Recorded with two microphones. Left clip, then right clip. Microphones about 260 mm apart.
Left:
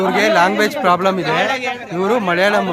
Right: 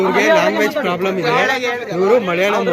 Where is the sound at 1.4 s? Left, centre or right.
Centre.